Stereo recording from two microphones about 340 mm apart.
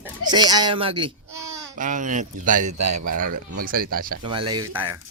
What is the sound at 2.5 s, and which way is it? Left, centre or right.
Speech, right.